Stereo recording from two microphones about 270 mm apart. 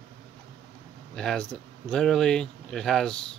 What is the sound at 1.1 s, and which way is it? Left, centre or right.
Speech, centre.